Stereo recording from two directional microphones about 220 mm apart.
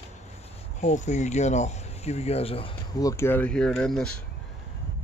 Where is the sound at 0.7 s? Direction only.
30° left (ahead or behind); by 4.1 s 5° left (ahead or behind).